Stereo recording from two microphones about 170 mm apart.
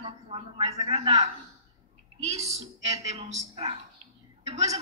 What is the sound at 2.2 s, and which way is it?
A man's voice, 40° right (ahead or behind).